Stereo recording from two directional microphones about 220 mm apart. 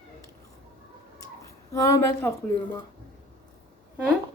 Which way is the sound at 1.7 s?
15° left (ahead or behind).